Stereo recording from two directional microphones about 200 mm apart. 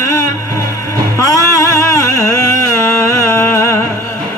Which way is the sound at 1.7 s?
15° left (ahead or behind).